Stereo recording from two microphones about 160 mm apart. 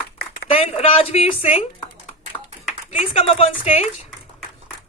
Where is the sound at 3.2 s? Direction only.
40° left (ahead or behind).